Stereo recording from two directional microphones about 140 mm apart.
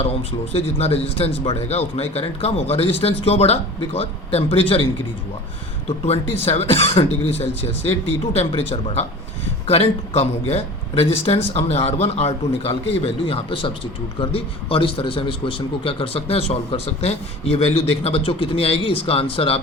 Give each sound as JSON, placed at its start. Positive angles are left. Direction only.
{"t": 0.0, "sound": "a man's voice", "side_deg": 45}
{"t": 6.4, "sound": "a man's voice", "side_deg": 45}